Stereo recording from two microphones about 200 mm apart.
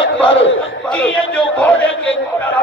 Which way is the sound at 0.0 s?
70° left (ahead or behind).